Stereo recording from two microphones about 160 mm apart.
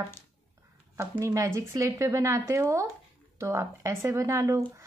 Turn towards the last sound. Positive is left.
turn(degrees=-20)  # may be behind; listen again after turning